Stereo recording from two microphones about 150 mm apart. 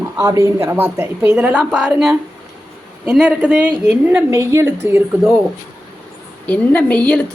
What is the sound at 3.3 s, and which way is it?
A woman's voice, 10° right (ahead or behind).